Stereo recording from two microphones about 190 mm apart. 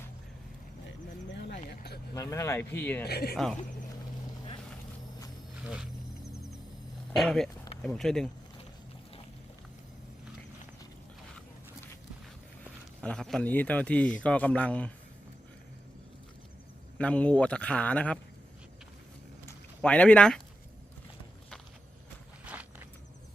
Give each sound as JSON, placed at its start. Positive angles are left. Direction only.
{"t": 0.9, "sound": "a sound", "side_deg": 65}
{"t": 2.1, "sound": "a man's voice", "side_deg": 15}
{"t": 3.0, "sound": "speech", "side_deg": 55}
{"t": 3.3, "sound": "speech", "side_deg": 0}
{"t": 5.6, "sound": "speech", "side_deg": -5}
{"t": 7.2, "sound": "speech", "side_deg": 0}
{"t": 13.0, "sound": "a man's voice", "side_deg": 5}
{"t": 17.0, "sound": "a man's voice", "side_deg": 5}
{"t": 19.5, "sound": "a sound", "side_deg": 5}
{"t": 22.4, "sound": "walk", "side_deg": -5}